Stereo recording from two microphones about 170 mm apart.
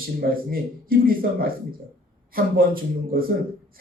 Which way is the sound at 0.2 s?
60° right (ahead or behind).